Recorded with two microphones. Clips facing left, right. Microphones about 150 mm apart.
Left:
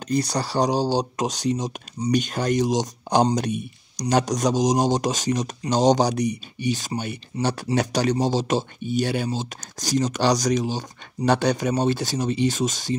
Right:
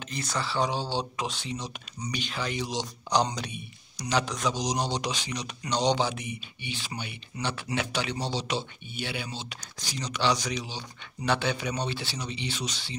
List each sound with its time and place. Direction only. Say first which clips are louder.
0.1 s speech: left 9 dB; 40° left (ahead or behind)